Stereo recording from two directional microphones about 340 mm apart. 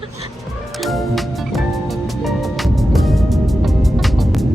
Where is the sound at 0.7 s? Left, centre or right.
Centre.